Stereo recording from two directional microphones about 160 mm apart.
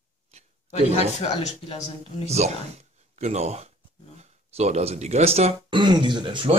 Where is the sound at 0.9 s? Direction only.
40° left (ahead or behind).